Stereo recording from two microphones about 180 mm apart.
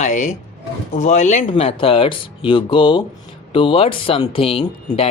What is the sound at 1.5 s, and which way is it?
Speech, 30° left (ahead or behind).